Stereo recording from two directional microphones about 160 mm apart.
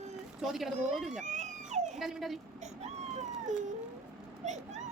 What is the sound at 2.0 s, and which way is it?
Speech, centre (ahead or behind).